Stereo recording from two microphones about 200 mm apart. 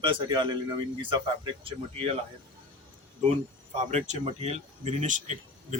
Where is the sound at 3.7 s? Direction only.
35° right (ahead or behind).